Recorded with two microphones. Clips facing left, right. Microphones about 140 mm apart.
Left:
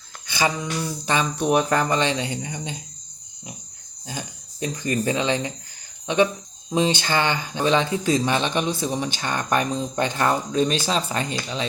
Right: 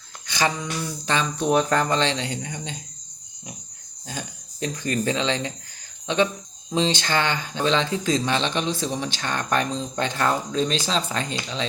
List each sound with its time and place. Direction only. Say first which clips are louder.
0.3 s speech: left 1 dB; 10° left (ahead or behind)
4.1 s speech: left 1 dB; 10° left (ahead or behind)
6.7 s speech: left 2 dB; 10° left (ahead or behind)